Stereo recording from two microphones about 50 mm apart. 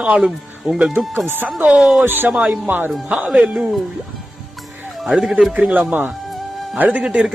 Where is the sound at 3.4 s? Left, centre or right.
Centre.